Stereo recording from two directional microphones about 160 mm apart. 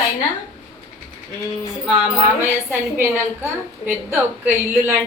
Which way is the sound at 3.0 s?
15° right (ahead or behind).